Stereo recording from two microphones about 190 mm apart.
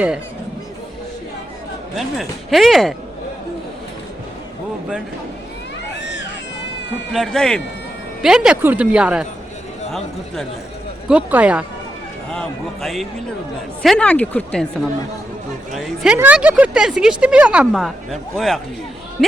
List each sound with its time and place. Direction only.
2.0 s speech: centre (ahead or behind)
6.0 s a sound: 65° left (ahead or behind)
7.1 s speech: centre (ahead or behind)
11.1 s speech: 5° right (ahead or behind)